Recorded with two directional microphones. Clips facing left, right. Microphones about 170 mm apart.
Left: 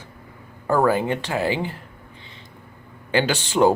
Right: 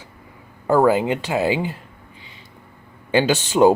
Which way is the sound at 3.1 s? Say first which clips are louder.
Right 3 dB; 15° right (ahead or behind).